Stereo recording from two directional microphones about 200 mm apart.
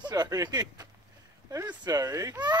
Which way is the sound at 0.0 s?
20° right (ahead or behind).